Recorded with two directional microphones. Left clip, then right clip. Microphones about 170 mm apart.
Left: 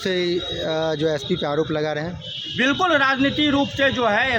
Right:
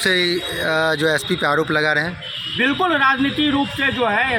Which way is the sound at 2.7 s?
30° left (ahead or behind).